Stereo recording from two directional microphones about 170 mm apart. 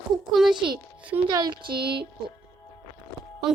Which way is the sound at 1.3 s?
25° right (ahead or behind).